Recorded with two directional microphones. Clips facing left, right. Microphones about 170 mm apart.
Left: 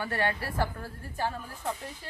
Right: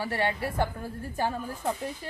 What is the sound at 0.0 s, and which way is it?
A woman's voice, 25° right (ahead or behind).